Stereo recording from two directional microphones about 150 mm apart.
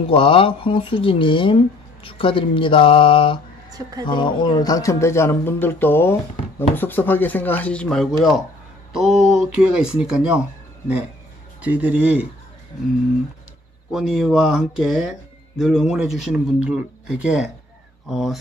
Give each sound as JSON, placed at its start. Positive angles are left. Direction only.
{"t": 0.0, "sound": "speech", "side_deg": 35}
{"t": 11.6, "sound": "a man's voice", "side_deg": -10}
{"t": 13.9, "sound": "speech", "side_deg": 0}